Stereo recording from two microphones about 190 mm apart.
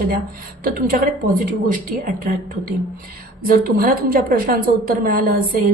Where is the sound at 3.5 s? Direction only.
50° right (ahead or behind).